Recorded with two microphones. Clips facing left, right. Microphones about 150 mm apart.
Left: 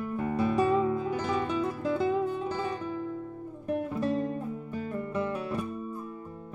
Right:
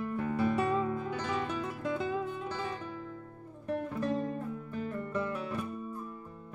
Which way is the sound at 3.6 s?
10° left (ahead or behind).